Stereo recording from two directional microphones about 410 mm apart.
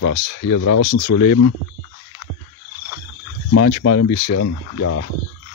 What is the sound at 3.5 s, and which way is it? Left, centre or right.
Speech, left.